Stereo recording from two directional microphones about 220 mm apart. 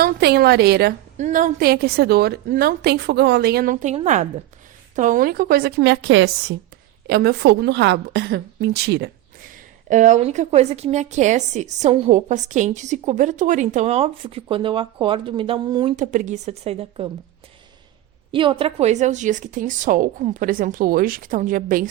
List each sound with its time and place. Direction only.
0.0 s a woman's voice: 45° right (ahead or behind)
1.1 s a woman's voice: 35° right (ahead or behind); by 6.3 s 55° right (ahead or behind)
7.1 s a woman's voice: 45° right (ahead or behind)
9.9 s a woman's voice: 35° right (ahead or behind)
16.0 s a woman's voice: 35° right (ahead or behind)
18.3 s a woman's voice: 25° right (ahead or behind); by 21.8 s 40° right (ahead or behind)